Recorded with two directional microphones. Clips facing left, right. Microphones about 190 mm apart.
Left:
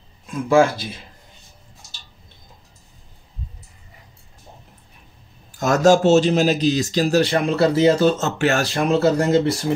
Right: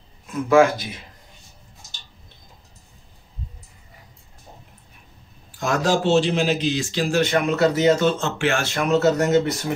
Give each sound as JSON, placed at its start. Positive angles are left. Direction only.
{"t": 0.5, "sound": "speech", "side_deg": 30}
{"t": 5.6, "sound": "a man's voice", "side_deg": 45}